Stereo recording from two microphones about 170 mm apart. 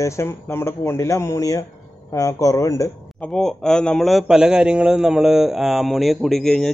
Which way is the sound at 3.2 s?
Centre (ahead or behind).